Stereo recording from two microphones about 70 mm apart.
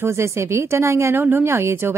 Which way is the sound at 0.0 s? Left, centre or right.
Right.